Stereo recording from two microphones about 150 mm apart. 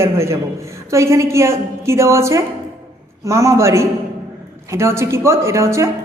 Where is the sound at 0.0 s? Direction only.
20° right (ahead or behind).